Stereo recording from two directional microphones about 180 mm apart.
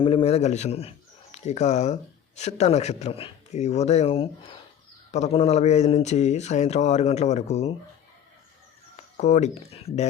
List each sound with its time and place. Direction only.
0.0 s a man's voice: 30° left (ahead or behind)
9.1 s a man's voice: 40° left (ahead or behind)